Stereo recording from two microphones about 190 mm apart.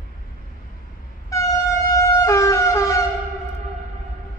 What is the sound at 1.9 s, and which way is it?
Siren, 15° left (ahead or behind).